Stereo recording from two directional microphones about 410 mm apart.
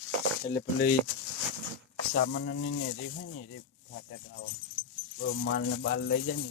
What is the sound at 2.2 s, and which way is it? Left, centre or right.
Speech, left.